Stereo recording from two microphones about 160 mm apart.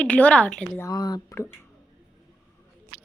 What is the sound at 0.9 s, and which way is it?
Speech, 25° left (ahead or behind).